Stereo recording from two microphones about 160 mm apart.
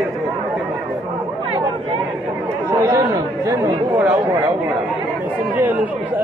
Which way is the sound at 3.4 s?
25° right (ahead or behind).